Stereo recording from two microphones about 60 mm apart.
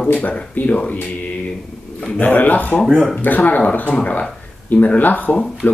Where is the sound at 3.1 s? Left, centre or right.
Left.